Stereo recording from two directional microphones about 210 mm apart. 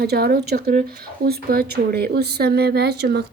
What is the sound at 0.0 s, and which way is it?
Speech, 50° right (ahead or behind).